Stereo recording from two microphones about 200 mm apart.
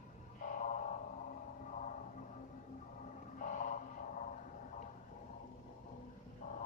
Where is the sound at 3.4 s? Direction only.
40° left (ahead or behind).